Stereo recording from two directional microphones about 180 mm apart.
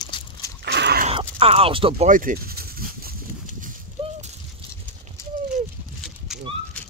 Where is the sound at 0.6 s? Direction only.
70° right (ahead or behind).